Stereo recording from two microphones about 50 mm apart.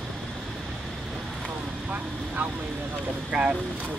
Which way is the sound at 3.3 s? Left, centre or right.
Right.